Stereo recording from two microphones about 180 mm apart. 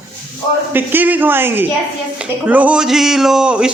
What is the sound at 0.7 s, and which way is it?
Speech, 10° right (ahead or behind).